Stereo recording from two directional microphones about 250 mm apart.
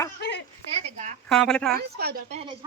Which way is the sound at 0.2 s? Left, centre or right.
Left.